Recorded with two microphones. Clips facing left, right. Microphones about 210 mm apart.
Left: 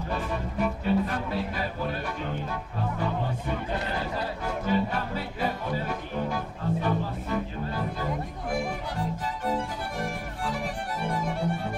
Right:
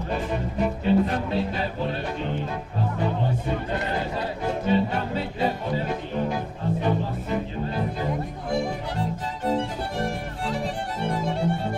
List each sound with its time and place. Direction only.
0.1 s music: 20° right (ahead or behind)
9.5 s violin: 25° right (ahead or behind)